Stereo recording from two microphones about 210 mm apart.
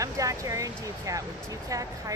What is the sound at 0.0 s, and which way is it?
Speech, 15° right (ahead or behind).